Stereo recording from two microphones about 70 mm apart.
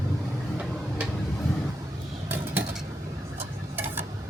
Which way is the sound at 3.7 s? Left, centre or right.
Right.